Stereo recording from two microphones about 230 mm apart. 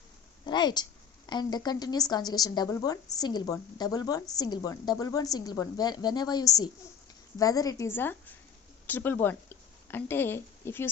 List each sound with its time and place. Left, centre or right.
0.4 s a woman's voice: centre